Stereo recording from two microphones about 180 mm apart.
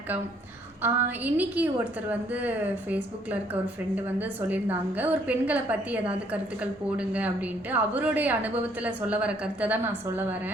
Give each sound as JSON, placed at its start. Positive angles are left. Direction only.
{"t": 0.8, "sound": "a woman's voice", "side_deg": -10}